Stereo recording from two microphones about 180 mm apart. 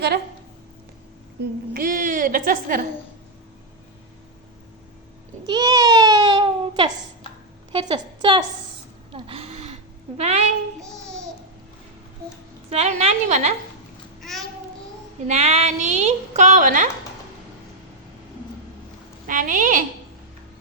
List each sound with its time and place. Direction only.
1.7 s a woman's voice: 50° right (ahead or behind)
5.5 s a sound: 20° right (ahead or behind)
7.7 s a woman's voice: 25° right (ahead or behind)
9.1 s a sound: 30° right (ahead or behind)
10.2 s a woman's voice: 40° right (ahead or behind)
12.7 s a woman's voice: 35° right (ahead or behind)
14.2 s babbling: centre (ahead or behind)
15.3 s a woman's voice: 35° right (ahead or behind)
19.3 s a woman's voice: 45° right (ahead or behind)